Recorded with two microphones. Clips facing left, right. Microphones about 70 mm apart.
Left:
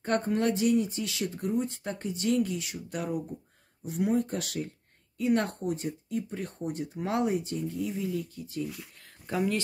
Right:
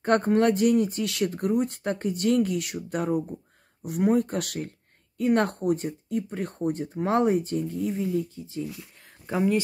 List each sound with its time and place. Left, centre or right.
0.0 s speech: right
8.2 s speech: right